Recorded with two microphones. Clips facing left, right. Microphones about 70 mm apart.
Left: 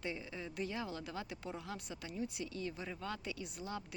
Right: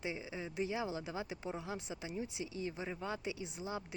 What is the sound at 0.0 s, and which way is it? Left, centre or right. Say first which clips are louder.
Speech: right 1 dB; centre.